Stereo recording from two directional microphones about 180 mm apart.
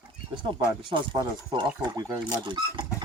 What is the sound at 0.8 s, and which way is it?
Speech, 25° right (ahead or behind).